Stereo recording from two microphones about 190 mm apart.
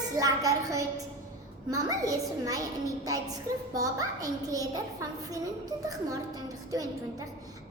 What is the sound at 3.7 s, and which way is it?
Speech, 20° right (ahead or behind).